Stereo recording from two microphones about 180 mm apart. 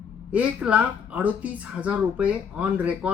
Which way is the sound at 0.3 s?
10° right (ahead or behind).